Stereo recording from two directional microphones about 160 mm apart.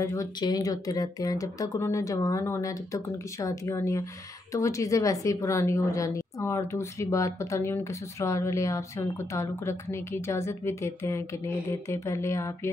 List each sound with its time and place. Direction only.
0.0 s a woman's voice: 20° left (ahead or behind)